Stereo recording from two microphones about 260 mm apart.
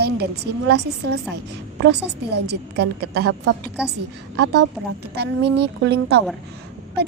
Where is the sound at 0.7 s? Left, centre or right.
Right.